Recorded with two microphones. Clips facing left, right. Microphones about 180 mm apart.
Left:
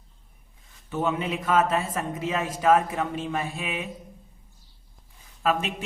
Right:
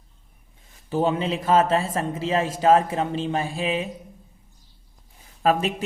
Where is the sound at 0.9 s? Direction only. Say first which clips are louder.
Right 4 dB; 30° right (ahead or behind).